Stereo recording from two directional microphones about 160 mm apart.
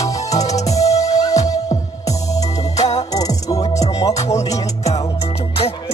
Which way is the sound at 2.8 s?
45° left (ahead or behind).